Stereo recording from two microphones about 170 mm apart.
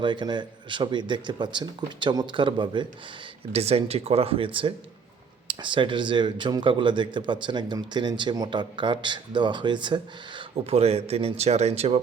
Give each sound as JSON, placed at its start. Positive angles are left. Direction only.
{"t": 0.0, "sound": "speech", "side_deg": -25}